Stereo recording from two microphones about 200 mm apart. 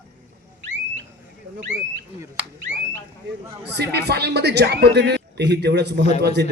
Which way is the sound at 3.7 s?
55° right (ahead or behind).